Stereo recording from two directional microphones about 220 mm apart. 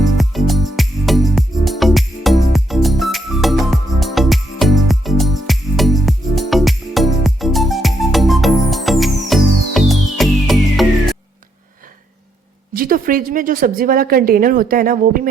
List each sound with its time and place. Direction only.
0.2 s music: centre (ahead or behind)
12.7 s a woman's voice: 40° right (ahead or behind)